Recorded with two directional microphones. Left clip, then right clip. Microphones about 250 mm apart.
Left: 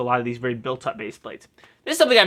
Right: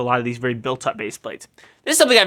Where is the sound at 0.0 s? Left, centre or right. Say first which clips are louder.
Right 2 dB; right.